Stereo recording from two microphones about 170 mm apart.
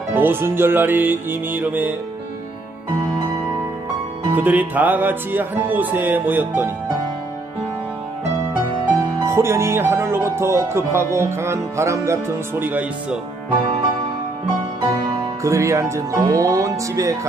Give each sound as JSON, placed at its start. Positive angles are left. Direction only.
{"t": 0.1, "sound": "speech", "side_deg": -10}
{"t": 4.4, "sound": "speech", "side_deg": -10}
{"t": 9.1, "sound": "speech", "side_deg": -15}
{"t": 15.4, "sound": "speech", "side_deg": -15}